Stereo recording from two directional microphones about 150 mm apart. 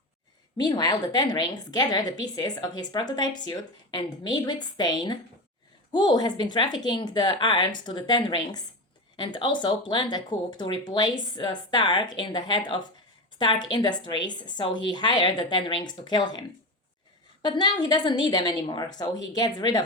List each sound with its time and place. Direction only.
0.5 s a woman's voice: 25° left (ahead or behind)
17.4 s a woman's voice: 30° left (ahead or behind)